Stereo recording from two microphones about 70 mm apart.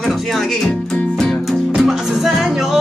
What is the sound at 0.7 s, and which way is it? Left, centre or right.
Music, centre.